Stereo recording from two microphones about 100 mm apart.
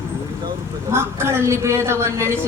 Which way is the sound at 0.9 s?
25° right (ahead or behind).